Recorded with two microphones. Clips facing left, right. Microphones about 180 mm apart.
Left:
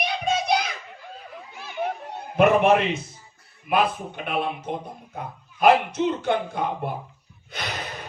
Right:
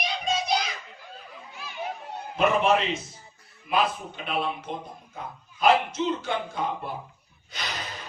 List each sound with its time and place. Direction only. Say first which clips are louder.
0.0 s a sound: left 4 dB; 60° left (ahead or behind)
2.3 s speech: left 5 dB; 55° left (ahead or behind)
7.5 s gasp: left 3 dB; 55° left (ahead or behind)